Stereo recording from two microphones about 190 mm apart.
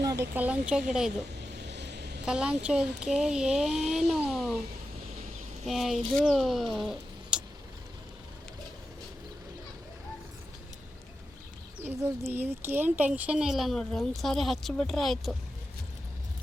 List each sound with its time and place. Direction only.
0.0 s speech: 15° right (ahead or behind)
1.6 s vehicle: 65° right (ahead or behind)
2.2 s speech: 5° right (ahead or behind)
5.6 s speech: centre (ahead or behind)
6.7 s a sound: centre (ahead or behind)
12.2 s speech: 10° right (ahead or behind)